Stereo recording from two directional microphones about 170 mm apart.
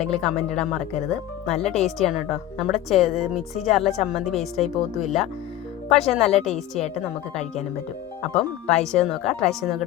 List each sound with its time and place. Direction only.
0.1 s speech: 5° left (ahead or behind)
6.5 s a woman's voice: 40° left (ahead or behind)
8.2 s speech: 5° left (ahead or behind)